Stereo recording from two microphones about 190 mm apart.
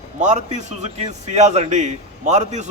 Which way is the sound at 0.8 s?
35° right (ahead or behind).